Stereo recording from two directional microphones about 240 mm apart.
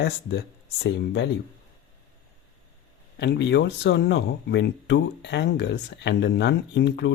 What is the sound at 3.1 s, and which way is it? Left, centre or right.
Speech, left.